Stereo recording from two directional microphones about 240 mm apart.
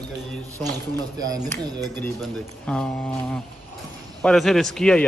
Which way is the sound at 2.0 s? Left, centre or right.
Centre.